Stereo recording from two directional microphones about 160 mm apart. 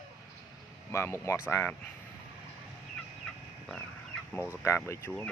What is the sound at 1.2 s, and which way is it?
Speech, 15° left (ahead or behind).